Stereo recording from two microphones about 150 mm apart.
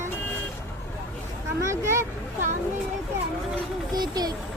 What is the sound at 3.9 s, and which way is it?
Speech, 25° right (ahead or behind).